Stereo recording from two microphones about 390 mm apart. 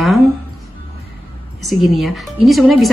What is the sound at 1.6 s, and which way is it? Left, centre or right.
Speech, centre.